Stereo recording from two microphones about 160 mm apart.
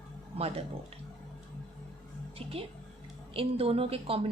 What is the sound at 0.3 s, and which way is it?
Speech, 40° right (ahead or behind).